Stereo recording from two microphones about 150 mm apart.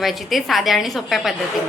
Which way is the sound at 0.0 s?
Centre (ahead or behind).